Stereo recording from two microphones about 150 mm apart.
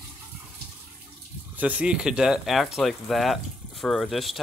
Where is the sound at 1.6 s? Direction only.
10° right (ahead or behind).